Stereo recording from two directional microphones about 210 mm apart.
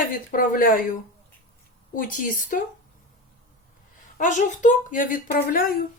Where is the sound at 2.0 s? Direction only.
40° left (ahead or behind).